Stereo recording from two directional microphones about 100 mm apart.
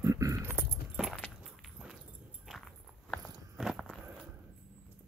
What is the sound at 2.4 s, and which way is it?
Walk, 5° left (ahead or behind).